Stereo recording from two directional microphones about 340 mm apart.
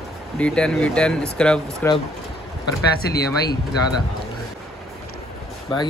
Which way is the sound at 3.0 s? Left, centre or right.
Left.